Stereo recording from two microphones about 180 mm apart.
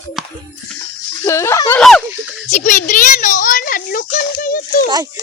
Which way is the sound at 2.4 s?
45° left (ahead or behind).